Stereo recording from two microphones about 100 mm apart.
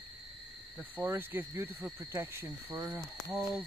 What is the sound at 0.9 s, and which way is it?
Cricket, 20° right (ahead or behind).